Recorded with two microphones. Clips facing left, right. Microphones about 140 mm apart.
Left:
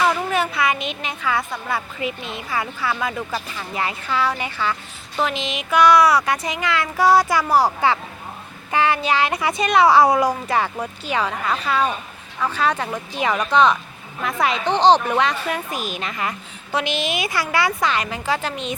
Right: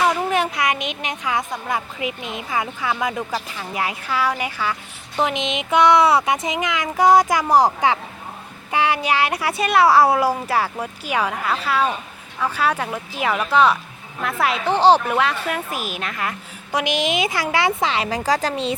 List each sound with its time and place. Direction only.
0.3 s a woman's voice: 15° right (ahead or behind); by 16.3 s centre (ahead or behind)
16.7 s a woman's voice: 15° right (ahead or behind)
18.2 s speech: 40° right (ahead or behind)